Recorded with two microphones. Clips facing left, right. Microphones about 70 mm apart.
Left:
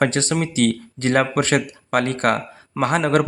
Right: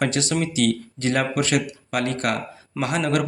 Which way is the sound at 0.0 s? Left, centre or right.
Left.